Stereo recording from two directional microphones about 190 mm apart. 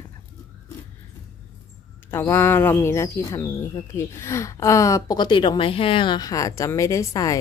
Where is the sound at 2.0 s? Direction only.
10° left (ahead or behind).